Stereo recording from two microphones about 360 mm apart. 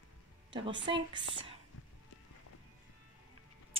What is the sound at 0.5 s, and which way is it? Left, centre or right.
Speech, centre.